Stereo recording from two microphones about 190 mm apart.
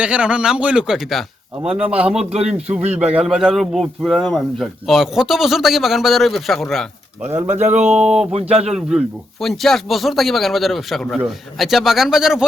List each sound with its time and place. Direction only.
0.0 s a man's voice: 5° right (ahead or behind)
1.6 s a man's voice: 30° right (ahead or behind)
2.9 s a man's voice: 5° right (ahead or behind)
7.9 s a man's voice: 5° right (ahead or behind)
8.3 s a man's voice: 30° right (ahead or behind)
8.7 s a man's voice: 5° right (ahead or behind)